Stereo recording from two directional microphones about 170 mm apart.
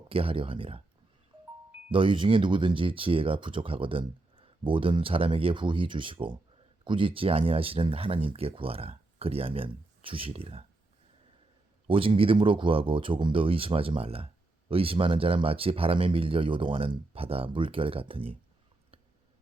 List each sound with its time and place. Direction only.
0.1 s speech: 30° right (ahead or behind)
1.9 s speech: 30° right (ahead or behind)
11.9 s speech: 30° right (ahead or behind)